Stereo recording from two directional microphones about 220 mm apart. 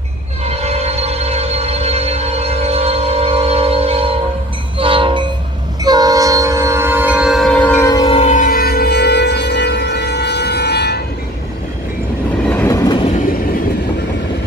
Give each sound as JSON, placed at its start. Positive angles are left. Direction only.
{"t": 0.5, "sound": "music", "side_deg": -30}
{"t": 4.7, "sound": "train", "side_deg": -25}
{"t": 12.4, "sound": "train", "side_deg": 10}